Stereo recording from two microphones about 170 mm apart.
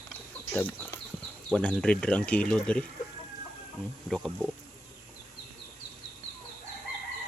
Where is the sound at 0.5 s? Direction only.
10° left (ahead or behind).